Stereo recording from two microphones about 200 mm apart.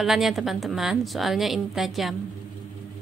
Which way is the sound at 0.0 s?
Centre (ahead or behind).